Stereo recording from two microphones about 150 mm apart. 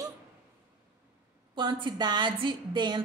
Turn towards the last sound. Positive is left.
turn(degrees=-30)  # may be behind; listen again after turning